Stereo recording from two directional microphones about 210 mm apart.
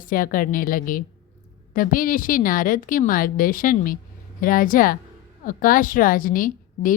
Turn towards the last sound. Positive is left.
turn(degrees=40)  # may be behind; listen again after turning